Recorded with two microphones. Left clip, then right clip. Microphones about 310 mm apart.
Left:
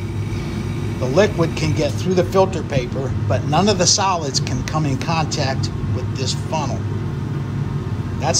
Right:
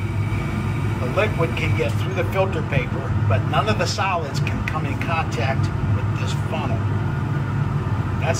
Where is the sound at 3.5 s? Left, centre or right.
Left.